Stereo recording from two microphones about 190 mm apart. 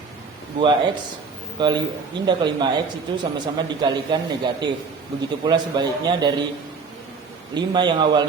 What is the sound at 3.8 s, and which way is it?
Speech, 25° right (ahead or behind).